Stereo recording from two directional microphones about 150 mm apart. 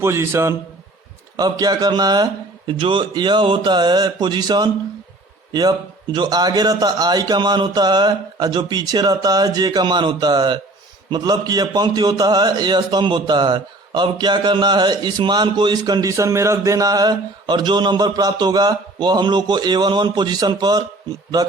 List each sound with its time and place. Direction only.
0.0 s a man's voice: 20° right (ahead or behind)